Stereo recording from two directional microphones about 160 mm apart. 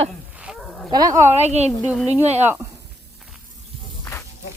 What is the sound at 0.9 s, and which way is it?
Speech, 20° right (ahead or behind).